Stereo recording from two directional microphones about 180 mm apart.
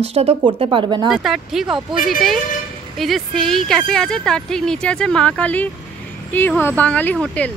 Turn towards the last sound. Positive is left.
turn(degrees=5)  # may be behind; listen again after turning